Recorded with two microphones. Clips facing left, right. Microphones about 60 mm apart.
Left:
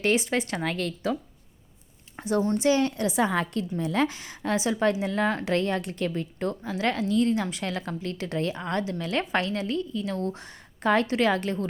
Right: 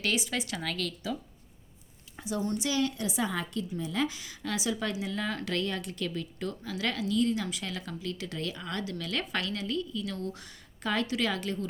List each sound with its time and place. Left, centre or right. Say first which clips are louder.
0.0 s a woman's voice: left 7 dB; left
2.1 s a sound: left 8 dB; left
2.4 s a woman's voice: left 6 dB; left